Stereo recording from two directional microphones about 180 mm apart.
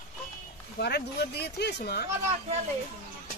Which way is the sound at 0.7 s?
65° left (ahead or behind).